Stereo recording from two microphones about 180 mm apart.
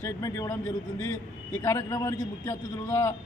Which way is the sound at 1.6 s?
15° left (ahead or behind).